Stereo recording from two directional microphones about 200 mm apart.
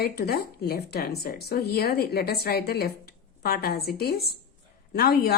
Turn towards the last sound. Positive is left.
turn(degrees=50)  # may be behind; listen again after turning